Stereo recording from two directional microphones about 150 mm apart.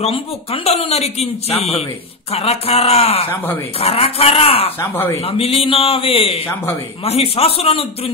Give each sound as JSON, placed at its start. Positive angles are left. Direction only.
{"t": 0.0, "sound": "a man's voice", "side_deg": 40}
{"t": 4.7, "sound": "speech", "side_deg": 15}
{"t": 5.2, "sound": "a man's voice", "side_deg": 40}